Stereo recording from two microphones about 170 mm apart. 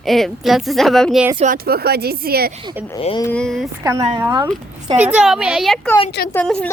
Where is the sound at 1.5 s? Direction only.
65° right (ahead or behind).